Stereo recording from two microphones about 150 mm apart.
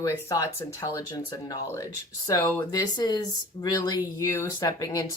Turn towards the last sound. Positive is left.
turn(degrees=25)  # may be behind; listen again after turning